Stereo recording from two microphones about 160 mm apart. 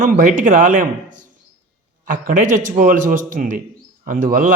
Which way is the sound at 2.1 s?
55° right (ahead or behind).